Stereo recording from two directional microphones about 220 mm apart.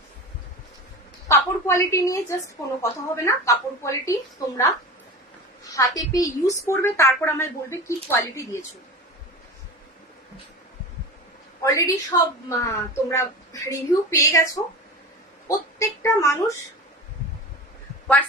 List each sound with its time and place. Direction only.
1.3 s a woman's voice: 15° left (ahead or behind)
11.6 s a woman's voice: 15° left (ahead or behind)